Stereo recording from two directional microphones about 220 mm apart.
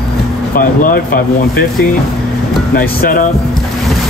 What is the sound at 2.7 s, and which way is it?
Speech, 40° left (ahead or behind).